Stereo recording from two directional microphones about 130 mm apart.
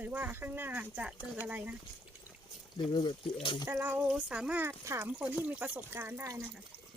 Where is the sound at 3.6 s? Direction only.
15° right (ahead or behind).